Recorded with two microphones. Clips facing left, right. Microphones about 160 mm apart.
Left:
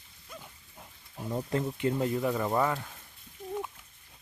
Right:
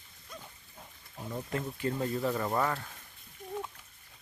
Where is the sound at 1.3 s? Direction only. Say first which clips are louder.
Left 5 dB; 30° left (ahead or behind).